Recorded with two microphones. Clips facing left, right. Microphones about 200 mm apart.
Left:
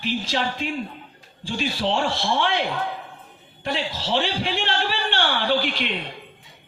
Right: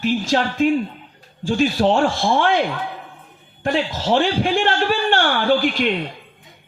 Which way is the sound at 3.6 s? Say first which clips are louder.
Right 7 dB; 45° right (ahead or behind).